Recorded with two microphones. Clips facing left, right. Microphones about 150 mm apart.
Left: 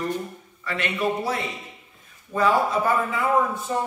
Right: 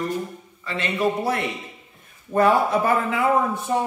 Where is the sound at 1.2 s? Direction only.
60° right (ahead or behind).